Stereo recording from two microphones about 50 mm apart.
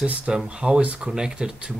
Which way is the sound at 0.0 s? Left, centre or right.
Right.